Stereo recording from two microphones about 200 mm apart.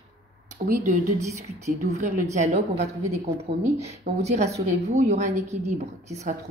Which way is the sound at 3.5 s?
55° right (ahead or behind).